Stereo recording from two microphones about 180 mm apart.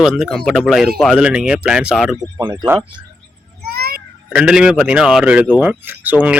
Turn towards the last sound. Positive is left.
turn(degrees=-10)  # may be behind; listen again after turning